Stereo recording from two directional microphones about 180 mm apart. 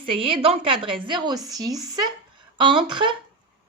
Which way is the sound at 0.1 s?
30° right (ahead or behind).